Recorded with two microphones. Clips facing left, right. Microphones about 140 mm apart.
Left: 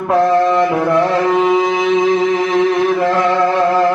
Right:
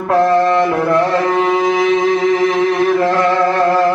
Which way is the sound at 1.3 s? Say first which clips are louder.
Left 1 dB; centre (ahead or behind).